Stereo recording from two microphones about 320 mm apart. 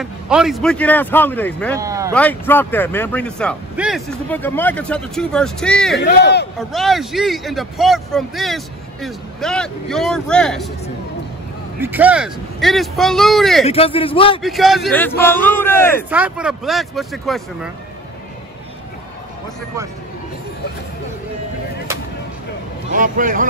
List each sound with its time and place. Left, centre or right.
0.0 s speech: centre
1.8 s a sound: centre
2.1 s speech: centre
5.9 s speech: left
6.7 s speech: centre
11.8 s speech: centre
13.7 s a man's voice: centre
14.4 s speech: centre
16.1 s speech: centre
22.9 s speech: right